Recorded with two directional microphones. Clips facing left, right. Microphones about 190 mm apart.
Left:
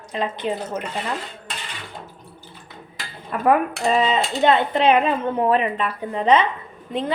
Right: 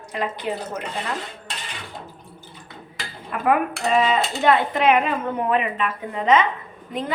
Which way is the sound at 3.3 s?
35° left (ahead or behind).